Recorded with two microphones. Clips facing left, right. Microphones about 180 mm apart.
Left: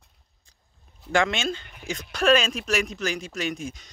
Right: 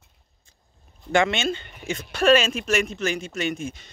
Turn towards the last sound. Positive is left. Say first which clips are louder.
# right 2 dB
turn(degrees=0)  # may be behind; listen again after turning